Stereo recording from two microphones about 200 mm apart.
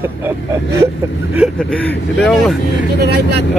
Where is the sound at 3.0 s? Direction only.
55° right (ahead or behind).